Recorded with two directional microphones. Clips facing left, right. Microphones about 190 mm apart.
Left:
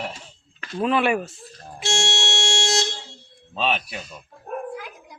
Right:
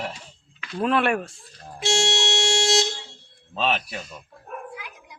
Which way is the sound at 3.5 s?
Centre (ahead or behind).